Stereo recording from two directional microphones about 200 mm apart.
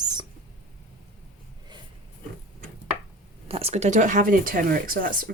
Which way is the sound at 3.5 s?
30° right (ahead or behind).